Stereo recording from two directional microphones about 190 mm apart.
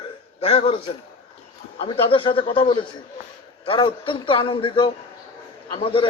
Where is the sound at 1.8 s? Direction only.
30° left (ahead or behind).